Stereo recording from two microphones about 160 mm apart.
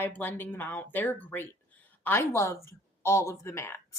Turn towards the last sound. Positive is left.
turn(degrees=15)  # may be behind; listen again after turning